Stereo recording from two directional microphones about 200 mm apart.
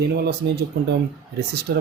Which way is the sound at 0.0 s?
55° right (ahead or behind).